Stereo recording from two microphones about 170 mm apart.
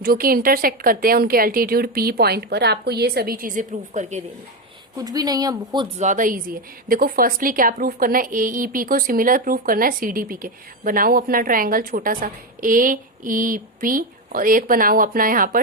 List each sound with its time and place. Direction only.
0.0 s a woman's voice: 60° right (ahead or behind)
4.9 s speech: 20° right (ahead or behind)
6.0 s a woman's voice: 50° right (ahead or behind)